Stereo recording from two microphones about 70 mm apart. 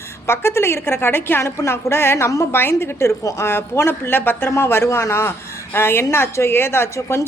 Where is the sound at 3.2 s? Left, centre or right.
Left.